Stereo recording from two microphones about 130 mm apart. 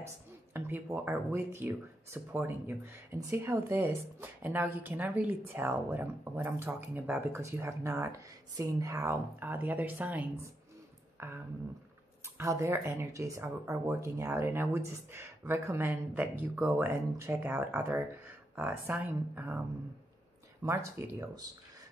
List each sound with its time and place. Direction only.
0.0 s speech: 15° right (ahead or behind)
12.4 s speech: 25° right (ahead or behind)
20.6 s speech: 20° right (ahead or behind)